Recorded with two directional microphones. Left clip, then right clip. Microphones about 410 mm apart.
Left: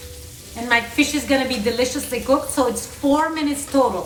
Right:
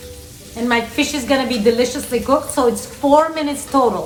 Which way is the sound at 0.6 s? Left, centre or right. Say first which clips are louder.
Right 1 dB; centre.